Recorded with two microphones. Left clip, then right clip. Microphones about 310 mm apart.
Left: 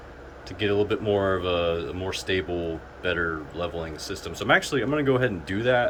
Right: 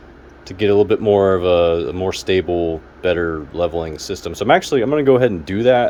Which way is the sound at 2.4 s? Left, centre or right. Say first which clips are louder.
Right 11 dB; right.